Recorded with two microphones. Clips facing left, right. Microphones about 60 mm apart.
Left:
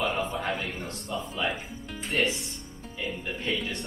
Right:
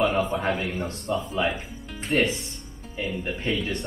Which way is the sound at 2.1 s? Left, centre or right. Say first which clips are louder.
Right 4 dB; right.